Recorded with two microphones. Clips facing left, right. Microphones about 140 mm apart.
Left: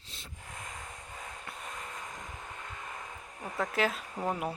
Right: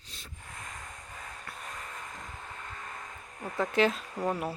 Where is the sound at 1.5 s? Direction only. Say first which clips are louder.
Even; 20° left (ahead or behind).